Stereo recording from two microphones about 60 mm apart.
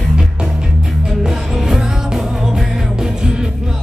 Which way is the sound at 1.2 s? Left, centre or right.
Centre.